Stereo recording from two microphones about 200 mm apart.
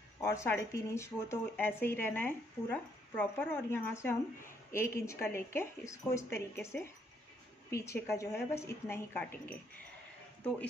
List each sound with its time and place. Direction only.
0.2 s speech: 15° left (ahead or behind)